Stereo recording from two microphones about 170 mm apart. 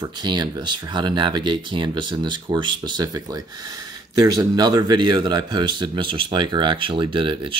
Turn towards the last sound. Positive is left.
turn(degrees=-30)  # may be behind; listen again after turning